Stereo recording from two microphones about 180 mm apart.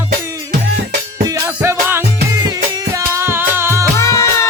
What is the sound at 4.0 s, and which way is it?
Music, 15° left (ahead or behind).